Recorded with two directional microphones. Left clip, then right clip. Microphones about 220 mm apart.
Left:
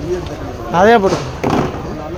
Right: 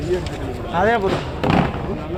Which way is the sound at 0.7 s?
55° left (ahead or behind).